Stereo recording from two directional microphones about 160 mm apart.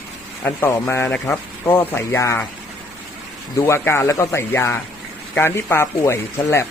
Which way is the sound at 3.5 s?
15° left (ahead or behind).